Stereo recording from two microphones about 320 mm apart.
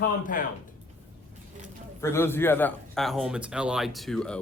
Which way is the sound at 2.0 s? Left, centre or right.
Centre.